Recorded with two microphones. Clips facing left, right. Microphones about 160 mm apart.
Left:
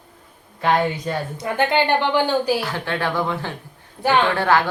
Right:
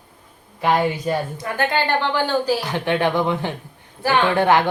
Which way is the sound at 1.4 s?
20° left (ahead or behind).